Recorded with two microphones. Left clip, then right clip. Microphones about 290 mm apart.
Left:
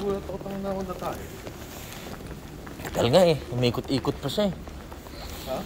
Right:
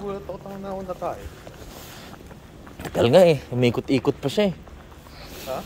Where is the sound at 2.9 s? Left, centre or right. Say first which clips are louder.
Right 4 dB; right.